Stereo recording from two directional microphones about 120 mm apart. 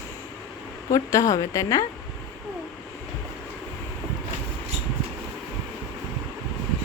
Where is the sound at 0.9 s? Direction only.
25° left (ahead or behind).